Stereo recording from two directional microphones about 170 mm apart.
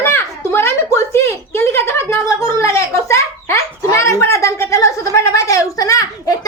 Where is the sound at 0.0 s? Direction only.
15° left (ahead or behind).